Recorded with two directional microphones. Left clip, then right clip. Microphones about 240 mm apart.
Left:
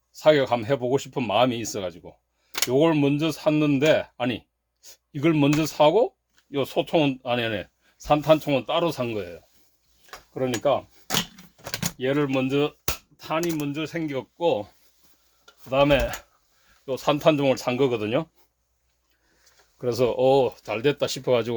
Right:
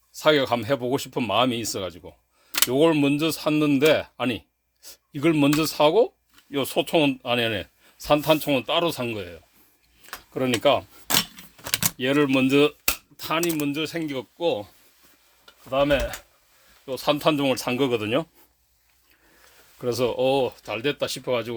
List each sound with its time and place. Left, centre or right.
0.1 s speech: centre
10.3 s cutlery: right
11.7 s speech: right; by 14.7 s centre
15.7 s speech: centre
16.8 s speech: centre
19.8 s speech: centre